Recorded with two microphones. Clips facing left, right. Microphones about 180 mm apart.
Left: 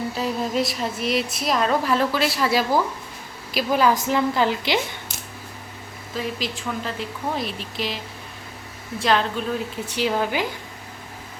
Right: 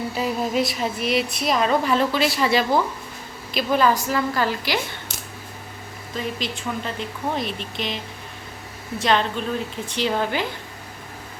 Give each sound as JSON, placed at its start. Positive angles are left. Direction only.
{"t": 0.1, "sound": "a woman's voice", "side_deg": -5}
{"t": 6.1, "sound": "a woman's voice", "side_deg": 0}
{"t": 9.0, "sound": "a woman's voice", "side_deg": 0}